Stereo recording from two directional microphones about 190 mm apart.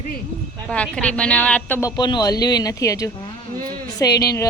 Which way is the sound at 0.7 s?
5° left (ahead or behind).